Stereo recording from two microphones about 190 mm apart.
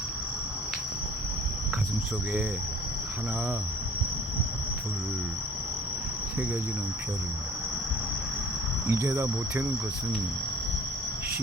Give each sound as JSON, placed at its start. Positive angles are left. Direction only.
{"t": 8.9, "sound": "speech", "side_deg": -15}